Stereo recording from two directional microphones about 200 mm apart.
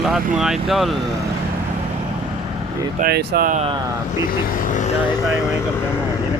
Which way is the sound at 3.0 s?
50° right (ahead or behind).